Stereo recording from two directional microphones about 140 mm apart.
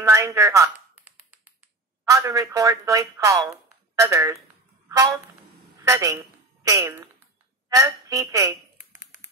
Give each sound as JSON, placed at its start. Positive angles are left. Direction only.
{"t": 0.0, "sound": "a sound", "side_deg": -20}
{"t": 2.0, "sound": "speech", "side_deg": -20}
{"t": 8.9, "sound": "tap", "side_deg": 60}